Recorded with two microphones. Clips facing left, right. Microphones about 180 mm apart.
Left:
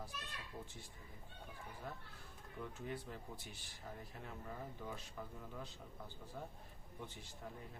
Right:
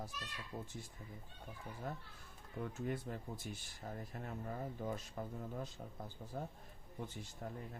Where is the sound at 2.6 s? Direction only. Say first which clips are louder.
Right 5 dB; 50° right (ahead or behind).